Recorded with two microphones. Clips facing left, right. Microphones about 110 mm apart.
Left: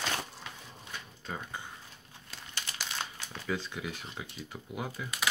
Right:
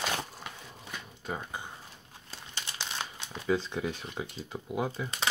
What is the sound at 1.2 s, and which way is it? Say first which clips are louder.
Speech: right 3 dB; 15° right (ahead or behind).